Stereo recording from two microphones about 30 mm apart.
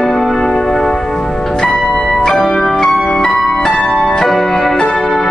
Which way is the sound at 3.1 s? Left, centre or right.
Centre.